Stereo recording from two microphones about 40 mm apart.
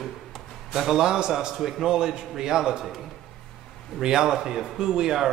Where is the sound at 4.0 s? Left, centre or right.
Centre.